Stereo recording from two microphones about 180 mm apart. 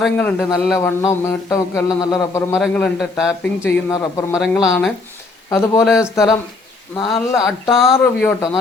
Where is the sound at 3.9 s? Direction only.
20° left (ahead or behind).